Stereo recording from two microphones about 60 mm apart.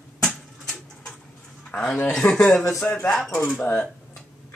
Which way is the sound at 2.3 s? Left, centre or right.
Centre.